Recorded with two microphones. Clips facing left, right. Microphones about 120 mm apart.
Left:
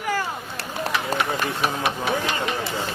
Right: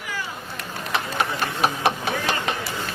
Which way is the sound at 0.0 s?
45° left (ahead or behind).